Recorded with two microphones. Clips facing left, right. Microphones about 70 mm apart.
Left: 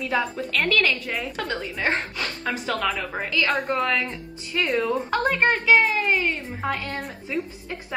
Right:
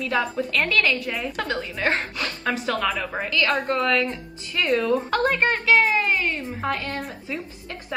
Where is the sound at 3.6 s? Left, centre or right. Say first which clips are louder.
Right 2 dB; centre.